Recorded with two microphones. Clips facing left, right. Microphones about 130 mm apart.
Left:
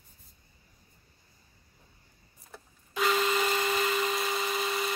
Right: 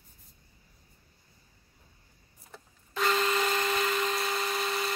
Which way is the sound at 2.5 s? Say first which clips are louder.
Left 1 dB; 5° left (ahead or behind).